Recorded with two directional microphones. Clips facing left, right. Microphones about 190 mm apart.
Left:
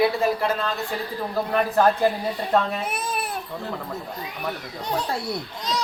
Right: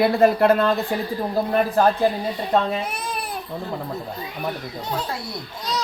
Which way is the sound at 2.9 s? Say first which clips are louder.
Left 1 dB; 5° left (ahead or behind).